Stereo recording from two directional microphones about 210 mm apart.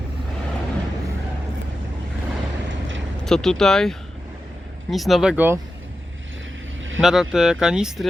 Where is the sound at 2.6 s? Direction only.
65° right (ahead or behind).